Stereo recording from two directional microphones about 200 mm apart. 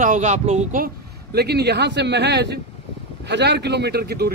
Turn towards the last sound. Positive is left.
turn(degrees=-50)  # may be behind; listen again after turning